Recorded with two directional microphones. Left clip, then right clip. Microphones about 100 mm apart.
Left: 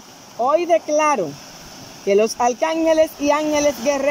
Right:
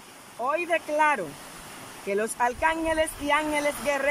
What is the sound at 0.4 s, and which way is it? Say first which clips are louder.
Speech: left 10 dB; 35° left (ahead or behind).